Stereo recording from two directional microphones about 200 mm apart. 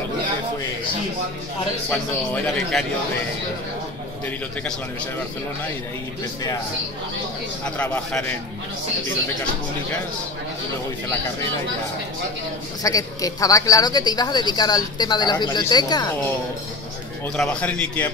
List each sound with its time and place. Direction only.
1.9 s a man's voice: 5° left (ahead or behind)
7.6 s a man's voice: 5° left (ahead or behind)
12.8 s speech: 15° left (ahead or behind)
17.4 s a man's voice: 5° left (ahead or behind)